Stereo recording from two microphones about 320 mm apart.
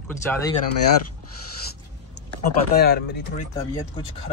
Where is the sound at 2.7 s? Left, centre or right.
Left.